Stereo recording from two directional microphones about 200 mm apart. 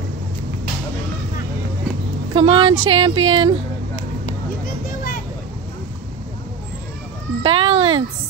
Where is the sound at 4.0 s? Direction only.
40° left (ahead or behind).